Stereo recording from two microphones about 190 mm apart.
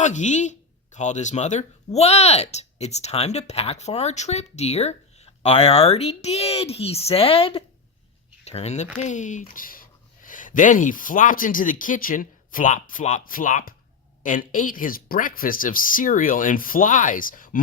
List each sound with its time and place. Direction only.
0.0 s speech: 40° left (ahead or behind)